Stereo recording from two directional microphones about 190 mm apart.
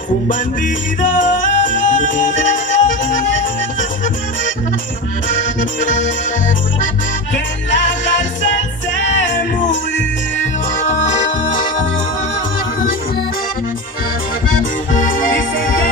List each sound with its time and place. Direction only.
1.4 s music: 40° left (ahead or behind)
5.6 s accordion: 40° left (ahead or behind)
14.9 s accordion: 45° left (ahead or behind)